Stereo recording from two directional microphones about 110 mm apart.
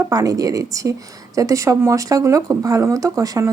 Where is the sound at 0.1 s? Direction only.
35° right (ahead or behind).